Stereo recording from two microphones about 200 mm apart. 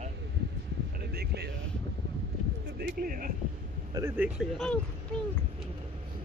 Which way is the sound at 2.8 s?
45° right (ahead or behind).